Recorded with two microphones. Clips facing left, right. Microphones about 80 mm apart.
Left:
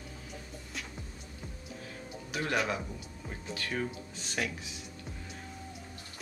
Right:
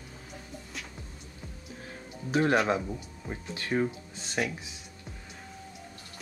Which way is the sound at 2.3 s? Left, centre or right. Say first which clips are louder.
Right 8 dB; right.